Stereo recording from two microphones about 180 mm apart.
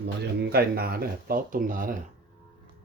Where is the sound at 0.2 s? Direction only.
60° right (ahead or behind).